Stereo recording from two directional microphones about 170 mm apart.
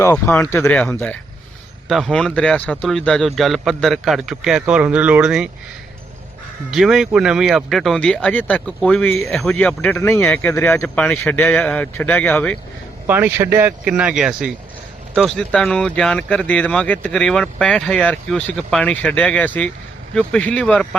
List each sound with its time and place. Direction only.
0.0 s speech: 15° left (ahead or behind)
1.9 s speech: centre (ahead or behind)
6.7 s speech: centre (ahead or behind)
13.1 s speech: 10° right (ahead or behind); by 20.8 s 5° left (ahead or behind)